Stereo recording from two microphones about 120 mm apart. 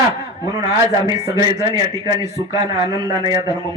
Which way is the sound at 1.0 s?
30° right (ahead or behind).